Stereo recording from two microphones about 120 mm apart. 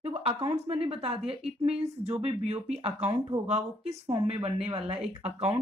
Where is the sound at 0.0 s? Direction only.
55° right (ahead or behind).